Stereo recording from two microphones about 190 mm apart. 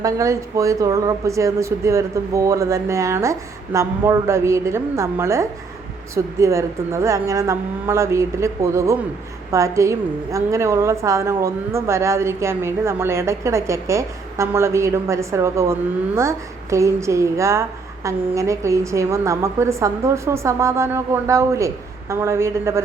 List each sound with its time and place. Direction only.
0.0 s a woman's voice: 15° right (ahead or behind)